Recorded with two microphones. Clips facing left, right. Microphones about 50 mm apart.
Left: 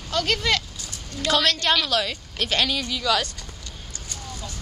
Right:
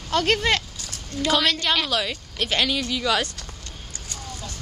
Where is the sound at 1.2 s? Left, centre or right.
Centre.